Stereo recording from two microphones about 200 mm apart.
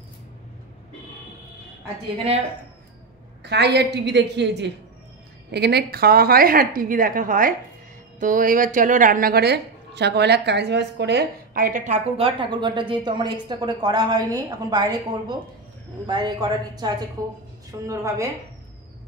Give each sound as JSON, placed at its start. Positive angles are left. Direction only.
{"t": 3.4, "sound": "a woman's voice", "side_deg": -55}